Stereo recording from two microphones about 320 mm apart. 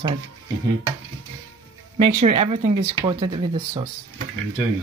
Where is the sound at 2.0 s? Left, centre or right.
Centre.